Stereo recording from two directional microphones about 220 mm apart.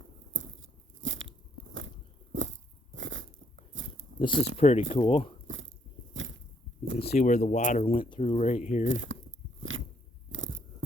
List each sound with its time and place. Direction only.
0.3 s a sound: 60° right (ahead or behind)
1.0 s biting: 60° right (ahead or behind)
4.2 s speech: 20° left (ahead or behind)
5.5 s biting: 60° right (ahead or behind)
6.9 s speech: 30° left (ahead or behind)
8.9 s speech: 60° right (ahead or behind)
9.6 s biting: 65° right (ahead or behind)